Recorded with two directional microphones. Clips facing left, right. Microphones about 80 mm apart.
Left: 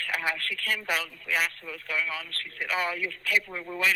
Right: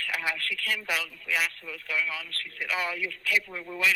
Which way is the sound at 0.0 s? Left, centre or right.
Left.